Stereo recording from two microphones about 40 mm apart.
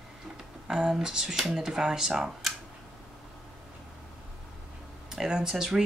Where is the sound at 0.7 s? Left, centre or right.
Centre.